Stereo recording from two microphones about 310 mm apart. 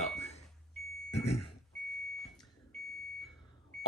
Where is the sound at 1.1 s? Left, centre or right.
Centre.